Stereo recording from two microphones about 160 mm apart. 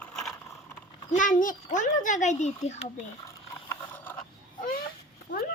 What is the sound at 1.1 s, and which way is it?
A child's voice, 55° left (ahead or behind).